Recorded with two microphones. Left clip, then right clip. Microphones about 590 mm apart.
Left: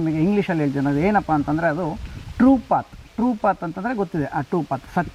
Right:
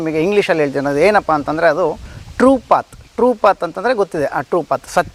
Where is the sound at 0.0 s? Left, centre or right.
Right.